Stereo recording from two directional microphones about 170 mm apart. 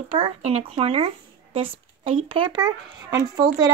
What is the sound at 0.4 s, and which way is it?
A woman's voice, 40° right (ahead or behind).